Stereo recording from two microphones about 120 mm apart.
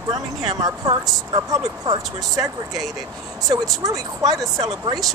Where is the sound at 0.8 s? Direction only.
35° right (ahead or behind).